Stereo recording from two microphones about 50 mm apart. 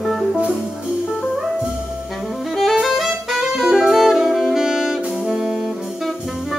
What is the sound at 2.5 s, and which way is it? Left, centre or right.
Music, centre.